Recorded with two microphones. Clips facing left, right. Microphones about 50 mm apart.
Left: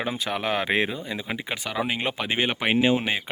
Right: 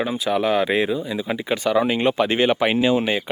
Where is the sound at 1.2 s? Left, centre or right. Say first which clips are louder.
Right 8 dB; centre.